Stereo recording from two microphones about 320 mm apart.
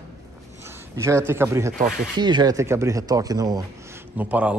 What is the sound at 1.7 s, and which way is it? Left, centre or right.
Speech, right.